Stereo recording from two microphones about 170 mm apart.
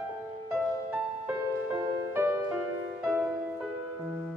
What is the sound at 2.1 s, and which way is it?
Music, 15° right (ahead or behind).